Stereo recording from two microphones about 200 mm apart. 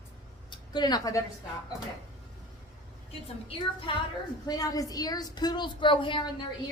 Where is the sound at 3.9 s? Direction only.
25° left (ahead or behind).